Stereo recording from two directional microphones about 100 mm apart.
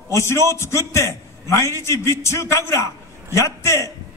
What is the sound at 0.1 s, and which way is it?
A man's voice, 25° left (ahead or behind).